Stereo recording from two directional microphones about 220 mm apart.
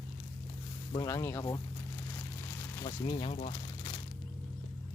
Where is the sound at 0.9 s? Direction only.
15° left (ahead or behind).